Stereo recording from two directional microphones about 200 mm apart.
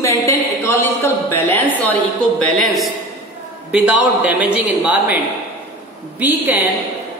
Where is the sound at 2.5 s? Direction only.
Centre (ahead or behind).